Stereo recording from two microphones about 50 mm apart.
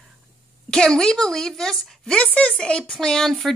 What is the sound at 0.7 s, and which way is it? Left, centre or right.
A woman's voice, centre.